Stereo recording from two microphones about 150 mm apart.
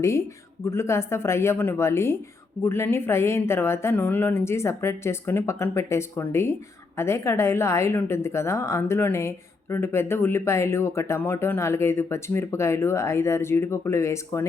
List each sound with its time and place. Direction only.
0.0 s speech: 20° left (ahead or behind)